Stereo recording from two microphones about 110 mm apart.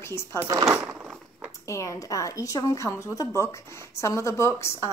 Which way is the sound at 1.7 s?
30° left (ahead or behind).